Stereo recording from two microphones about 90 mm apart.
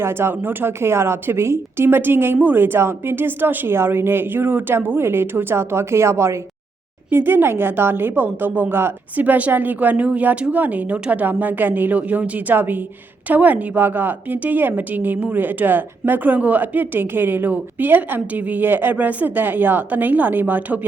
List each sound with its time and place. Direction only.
0.0 s a woman's voice: 25° right (ahead or behind)